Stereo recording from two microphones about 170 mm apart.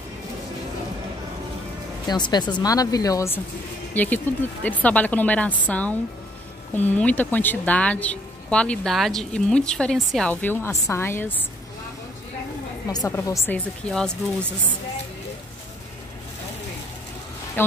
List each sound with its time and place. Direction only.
2.0 s speech: 25° left (ahead or behind)
12.9 s speech: 20° left (ahead or behind)
13.8 s speech: 5° left (ahead or behind)
17.6 s speech: 10° left (ahead or behind)